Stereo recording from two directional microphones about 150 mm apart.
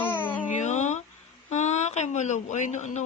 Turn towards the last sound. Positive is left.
turn(degrees=55)  # may be behind; listen again after turning